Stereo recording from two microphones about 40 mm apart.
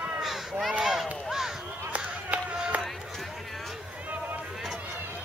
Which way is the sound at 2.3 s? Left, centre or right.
Right.